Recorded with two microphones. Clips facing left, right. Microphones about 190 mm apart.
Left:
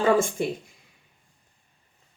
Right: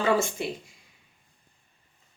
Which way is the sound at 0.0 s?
50° left (ahead or behind).